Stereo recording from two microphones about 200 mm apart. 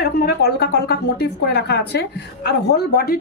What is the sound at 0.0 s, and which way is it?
A woman's voice, 50° left (ahead or behind).